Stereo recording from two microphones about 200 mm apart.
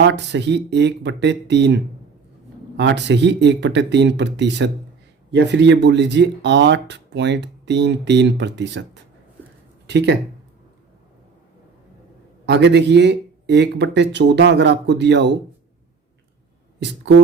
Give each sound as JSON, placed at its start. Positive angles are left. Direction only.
{"t": 0.0, "sound": "speech", "side_deg": -60}
{"t": 9.8, "sound": "speech", "side_deg": -60}
{"t": 12.5, "sound": "speech", "side_deg": -60}